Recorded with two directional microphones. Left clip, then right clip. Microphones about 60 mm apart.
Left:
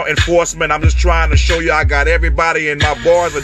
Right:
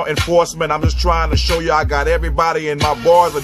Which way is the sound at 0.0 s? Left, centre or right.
Centre.